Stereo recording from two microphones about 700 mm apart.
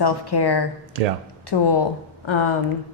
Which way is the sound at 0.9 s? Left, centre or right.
Right.